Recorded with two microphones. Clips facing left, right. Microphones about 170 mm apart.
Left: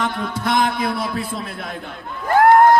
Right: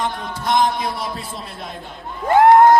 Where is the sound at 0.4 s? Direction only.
60° left (ahead or behind).